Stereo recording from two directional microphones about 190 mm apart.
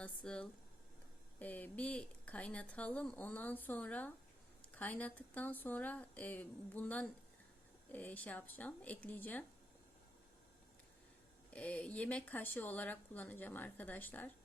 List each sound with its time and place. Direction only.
0.0 s a woman's voice: 5° left (ahead or behind)
11.5 s a woman's voice: 5° left (ahead or behind)